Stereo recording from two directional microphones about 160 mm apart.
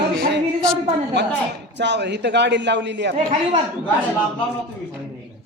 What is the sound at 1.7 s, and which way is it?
A man's voice, 90° right.